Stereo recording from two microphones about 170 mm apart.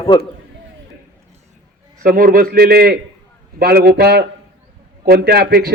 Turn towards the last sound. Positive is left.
turn(degrees=-65)  # may be behind; listen again after turning